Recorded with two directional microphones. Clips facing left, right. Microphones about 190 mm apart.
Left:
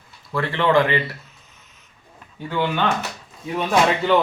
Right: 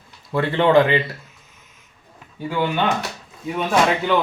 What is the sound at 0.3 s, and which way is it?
Speech, 20° right (ahead or behind).